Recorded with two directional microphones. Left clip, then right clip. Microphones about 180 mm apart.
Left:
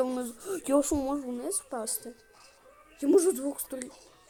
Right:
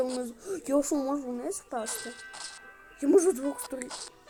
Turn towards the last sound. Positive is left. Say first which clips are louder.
# right 1 dB
turn(degrees=5)  # may be behind; listen again after turning